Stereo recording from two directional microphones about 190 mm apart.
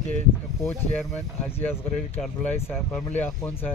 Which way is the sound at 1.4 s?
10° left (ahead or behind).